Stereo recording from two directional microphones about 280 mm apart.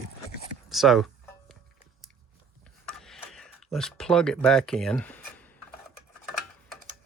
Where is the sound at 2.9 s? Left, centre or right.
Centre.